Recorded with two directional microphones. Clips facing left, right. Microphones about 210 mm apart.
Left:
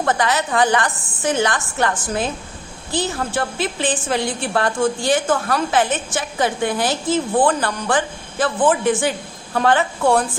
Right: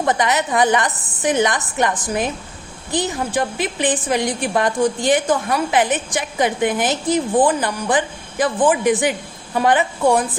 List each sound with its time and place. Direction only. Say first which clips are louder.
0.0 s a woman's voice: right 1 dB; 20° right (ahead or behind)